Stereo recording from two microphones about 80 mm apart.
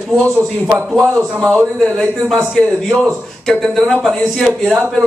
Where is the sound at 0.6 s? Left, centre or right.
Right.